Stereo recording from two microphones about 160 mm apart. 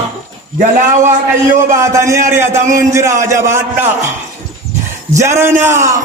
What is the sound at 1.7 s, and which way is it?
A man's voice, 20° right (ahead or behind).